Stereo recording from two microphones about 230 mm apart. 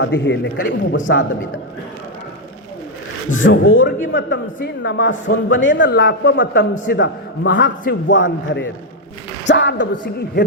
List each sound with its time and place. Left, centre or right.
0.0 s a man's voice: left
3.4 s a man's voice: left
3.8 s a man's voice: left